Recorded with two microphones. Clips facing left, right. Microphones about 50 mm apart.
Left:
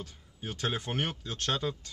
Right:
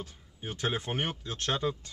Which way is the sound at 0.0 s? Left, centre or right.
Centre.